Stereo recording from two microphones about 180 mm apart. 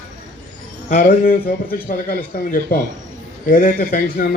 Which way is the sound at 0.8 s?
55° left (ahead or behind).